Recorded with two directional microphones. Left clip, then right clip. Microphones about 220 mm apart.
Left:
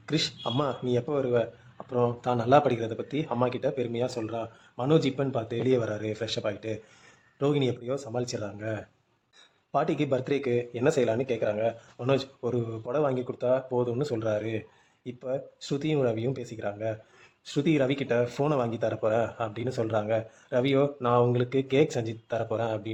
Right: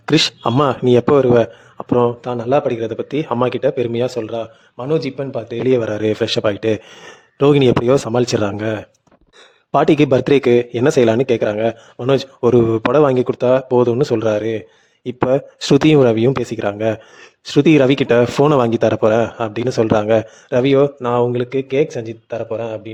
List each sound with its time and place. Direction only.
0.0 s speech: 45° right (ahead or behind)
2.2 s speech: 20° right (ahead or behind)
4.8 s speech: 10° right (ahead or behind)
5.6 s speech: 30° right (ahead or behind)
21.0 s speech: 25° right (ahead or behind)